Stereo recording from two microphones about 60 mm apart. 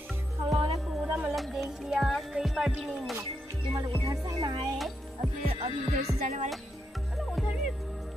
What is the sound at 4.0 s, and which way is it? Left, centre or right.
Music, right.